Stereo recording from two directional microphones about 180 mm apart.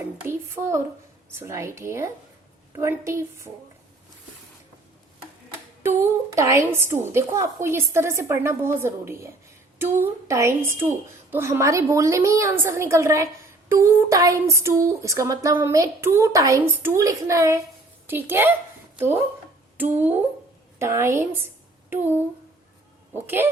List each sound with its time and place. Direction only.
0.2 s a sound: 15° right (ahead or behind)
1.3 s speech: 15° right (ahead or behind)
5.8 s a woman's voice: 15° right (ahead or behind)
19.7 s speech: 10° right (ahead or behind)